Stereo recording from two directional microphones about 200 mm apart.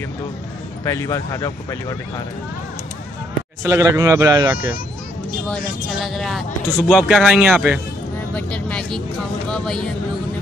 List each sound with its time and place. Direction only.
0.8 s speech: 15° left (ahead or behind)
3.6 s a man's voice: 15° right (ahead or behind)
5.5 s speech: centre (ahead or behind)
8.4 s a sound: 5° left (ahead or behind)
9.5 s speech: 5° left (ahead or behind)